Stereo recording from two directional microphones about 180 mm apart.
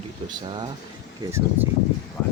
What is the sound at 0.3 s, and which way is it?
Speech, 25° right (ahead or behind).